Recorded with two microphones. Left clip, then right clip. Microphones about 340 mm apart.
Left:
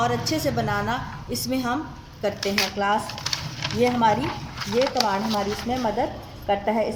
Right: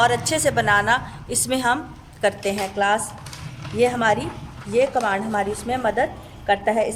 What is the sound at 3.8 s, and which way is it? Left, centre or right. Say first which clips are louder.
A woman's voice: right 2 dB; right.